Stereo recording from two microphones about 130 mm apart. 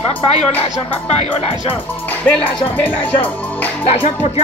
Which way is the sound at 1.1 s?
50° left (ahead or behind).